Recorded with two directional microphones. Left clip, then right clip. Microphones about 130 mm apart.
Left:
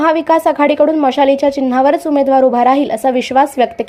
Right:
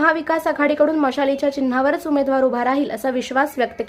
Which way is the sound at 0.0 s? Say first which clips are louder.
Left 7 dB; 30° left (ahead or behind).